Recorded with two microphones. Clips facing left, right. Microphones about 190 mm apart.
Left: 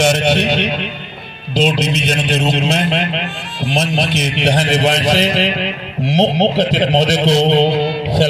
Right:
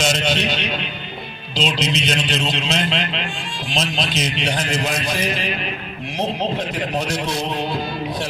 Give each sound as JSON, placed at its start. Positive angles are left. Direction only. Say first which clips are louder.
{"t": 0.0, "sound": "music", "louder": "left 6 dB", "side_deg": 60}
{"t": 1.5, "sound": "a man's voice", "louder": "left 6 dB", "side_deg": 55}